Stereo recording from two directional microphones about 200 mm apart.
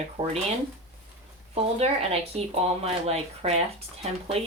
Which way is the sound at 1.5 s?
30° right (ahead or behind).